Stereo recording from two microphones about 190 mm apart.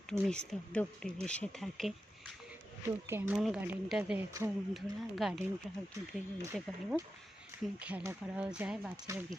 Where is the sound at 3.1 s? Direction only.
10° right (ahead or behind).